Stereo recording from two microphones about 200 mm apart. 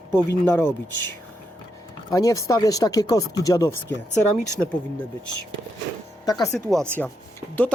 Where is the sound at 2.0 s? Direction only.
15° left (ahead or behind).